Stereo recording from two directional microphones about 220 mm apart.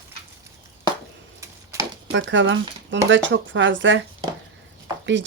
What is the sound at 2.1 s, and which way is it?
Speech, 55° right (ahead or behind).